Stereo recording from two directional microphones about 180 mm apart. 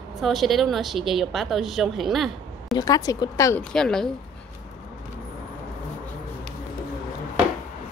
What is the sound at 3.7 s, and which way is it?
Speech, 5° left (ahead or behind).